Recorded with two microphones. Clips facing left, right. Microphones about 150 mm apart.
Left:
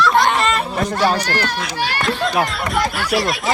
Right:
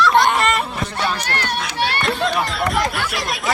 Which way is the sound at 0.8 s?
45° left (ahead or behind).